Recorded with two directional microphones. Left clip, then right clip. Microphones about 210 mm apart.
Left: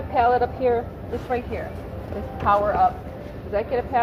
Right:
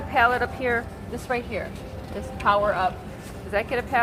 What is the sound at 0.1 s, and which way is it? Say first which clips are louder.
Speech: left 2 dB; 55° right (ahead or behind).